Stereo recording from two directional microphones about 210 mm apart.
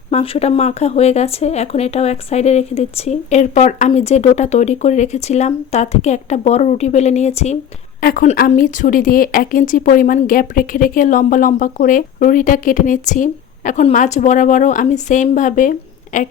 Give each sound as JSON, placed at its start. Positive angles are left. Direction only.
{"t": 0.1, "sound": "speech", "side_deg": 30}